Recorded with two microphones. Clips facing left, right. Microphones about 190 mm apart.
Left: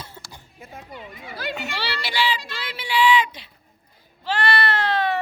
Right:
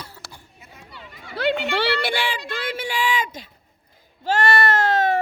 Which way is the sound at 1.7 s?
55° right (ahead or behind).